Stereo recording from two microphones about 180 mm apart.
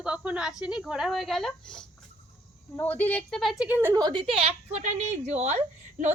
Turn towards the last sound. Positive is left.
turn(degrees=-40)  # may be behind; listen again after turning